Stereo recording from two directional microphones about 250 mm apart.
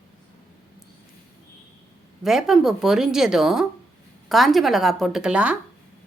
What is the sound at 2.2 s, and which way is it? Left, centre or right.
Speech, centre.